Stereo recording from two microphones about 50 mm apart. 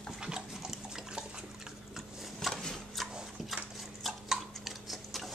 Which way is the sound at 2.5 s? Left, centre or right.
Centre.